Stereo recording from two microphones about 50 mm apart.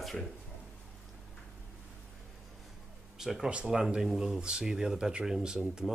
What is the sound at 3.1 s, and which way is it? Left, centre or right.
Speech, centre.